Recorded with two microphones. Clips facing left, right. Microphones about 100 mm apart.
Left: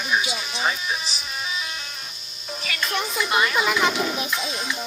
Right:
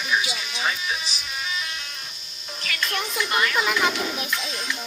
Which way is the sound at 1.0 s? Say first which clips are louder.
Left 1 dB; 10° left (ahead or behind).